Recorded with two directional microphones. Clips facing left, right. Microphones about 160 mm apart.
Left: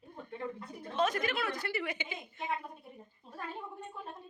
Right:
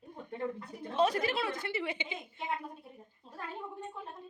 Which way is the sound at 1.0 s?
30° right (ahead or behind).